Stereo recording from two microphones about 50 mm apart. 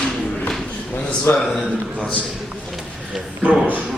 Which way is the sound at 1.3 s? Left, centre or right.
Left.